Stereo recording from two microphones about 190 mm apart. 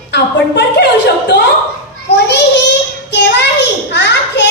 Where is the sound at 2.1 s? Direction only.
65° left (ahead or behind).